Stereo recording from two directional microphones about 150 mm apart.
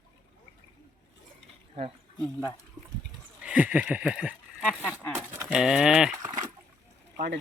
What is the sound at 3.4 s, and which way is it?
Speech, 10° right (ahead or behind).